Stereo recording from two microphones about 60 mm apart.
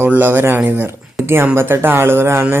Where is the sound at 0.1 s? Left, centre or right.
Right.